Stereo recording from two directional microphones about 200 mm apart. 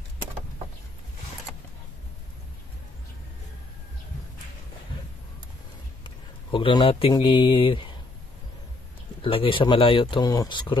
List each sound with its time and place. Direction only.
6.0 s speech: 25° left (ahead or behind)
9.2 s speech: 25° left (ahead or behind)